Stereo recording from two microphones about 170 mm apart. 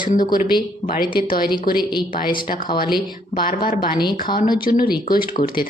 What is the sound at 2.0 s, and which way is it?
Speech, 60° left (ahead or behind).